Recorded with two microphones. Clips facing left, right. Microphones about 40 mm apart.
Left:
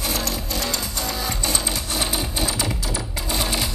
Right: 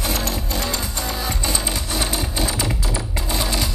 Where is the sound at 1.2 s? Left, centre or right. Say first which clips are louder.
Right 1 dB; right.